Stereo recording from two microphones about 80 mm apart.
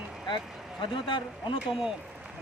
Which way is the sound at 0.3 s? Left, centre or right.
Left.